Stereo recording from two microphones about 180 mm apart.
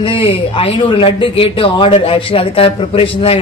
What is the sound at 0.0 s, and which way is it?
A man's voice, 30° left (ahead or behind).